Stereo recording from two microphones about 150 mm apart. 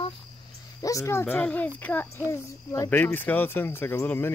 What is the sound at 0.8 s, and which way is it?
Speech, 20° left (ahead or behind).